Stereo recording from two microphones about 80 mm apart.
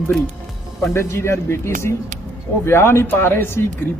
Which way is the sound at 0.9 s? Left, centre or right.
Left.